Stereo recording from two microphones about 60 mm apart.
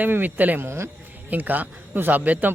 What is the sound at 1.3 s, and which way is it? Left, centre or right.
Speech, right.